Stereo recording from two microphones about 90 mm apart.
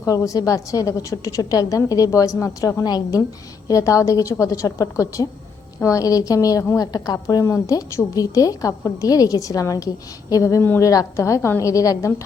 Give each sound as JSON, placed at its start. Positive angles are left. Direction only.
{"t": 0.3, "sound": "a woman's voice", "side_deg": 40}